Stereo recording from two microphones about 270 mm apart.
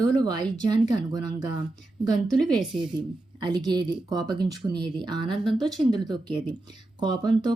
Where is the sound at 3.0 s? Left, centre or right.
Centre.